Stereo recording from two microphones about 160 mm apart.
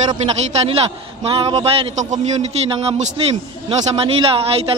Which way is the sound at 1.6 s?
45° right (ahead or behind).